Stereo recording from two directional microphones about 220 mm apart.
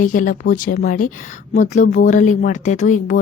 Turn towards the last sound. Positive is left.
turn(degrees=35)  # may be behind; listen again after turning